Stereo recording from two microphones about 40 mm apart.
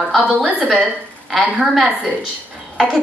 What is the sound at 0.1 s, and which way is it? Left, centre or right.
A woman's voice, centre.